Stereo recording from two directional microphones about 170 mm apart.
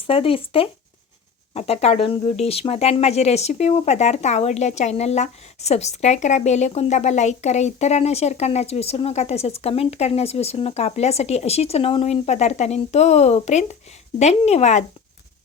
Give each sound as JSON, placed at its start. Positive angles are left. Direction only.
{"t": 0.1, "sound": "speech", "side_deg": 30}